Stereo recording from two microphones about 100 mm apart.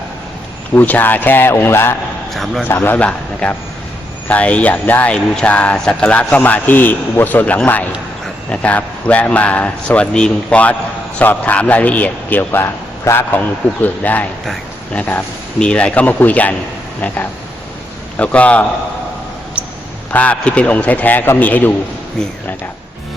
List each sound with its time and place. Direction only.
0.7 s speech: 20° left (ahead or behind)
2.3 s a man's voice: centre (ahead or behind)
2.8 s speech: 15° left (ahead or behind)
18.2 s speech: 15° left (ahead or behind)
20.1 s speech: 15° left (ahead or behind)